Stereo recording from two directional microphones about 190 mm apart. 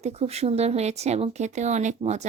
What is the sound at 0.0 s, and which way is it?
A woman's voice, 35° right (ahead or behind).